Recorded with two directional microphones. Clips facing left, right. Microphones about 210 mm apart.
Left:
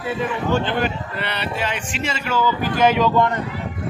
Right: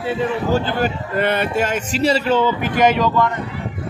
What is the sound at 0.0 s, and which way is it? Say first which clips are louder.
A man's voice: right 3 dB; 40° right (ahead or behind).